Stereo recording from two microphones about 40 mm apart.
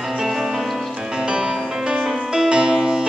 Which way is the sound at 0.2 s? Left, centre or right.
Centre.